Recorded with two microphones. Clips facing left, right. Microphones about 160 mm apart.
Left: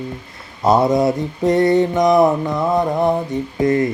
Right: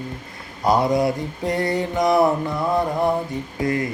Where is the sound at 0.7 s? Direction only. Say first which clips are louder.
Left 4 dB; 25° left (ahead or behind).